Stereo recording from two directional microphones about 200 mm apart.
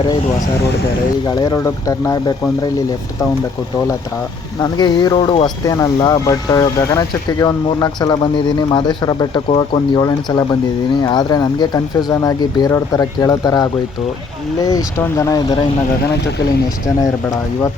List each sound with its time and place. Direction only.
1.3 s speech: 15° left (ahead or behind)
4.6 s speech: 20° left (ahead or behind)